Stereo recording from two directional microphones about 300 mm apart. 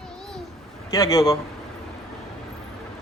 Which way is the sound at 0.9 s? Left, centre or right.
Centre.